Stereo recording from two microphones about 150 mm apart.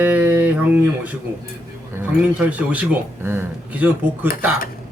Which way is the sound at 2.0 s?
10° right (ahead or behind).